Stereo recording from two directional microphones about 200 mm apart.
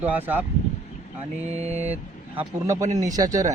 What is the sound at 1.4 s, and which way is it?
Mantra, 35° right (ahead or behind).